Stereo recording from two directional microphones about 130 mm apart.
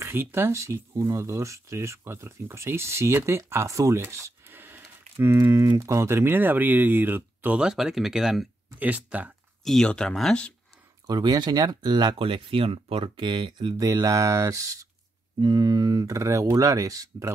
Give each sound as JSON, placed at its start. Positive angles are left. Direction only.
{"t": 0.0, "sound": "speech", "side_deg": -15}
{"t": 9.7, "sound": "speech", "side_deg": 5}
{"t": 11.1, "sound": "speech", "side_deg": -30}